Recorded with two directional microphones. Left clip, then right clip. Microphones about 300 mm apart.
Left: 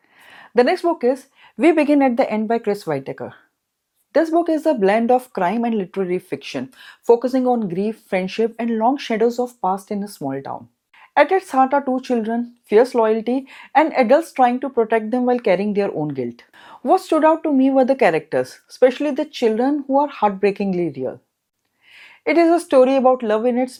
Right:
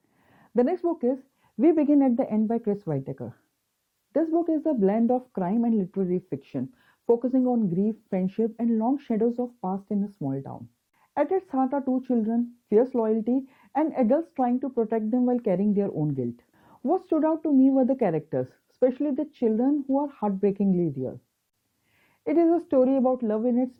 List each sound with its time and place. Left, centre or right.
0.3 s speech: centre
7.4 s speech: centre
7.7 s speech: centre
9.3 s speech: centre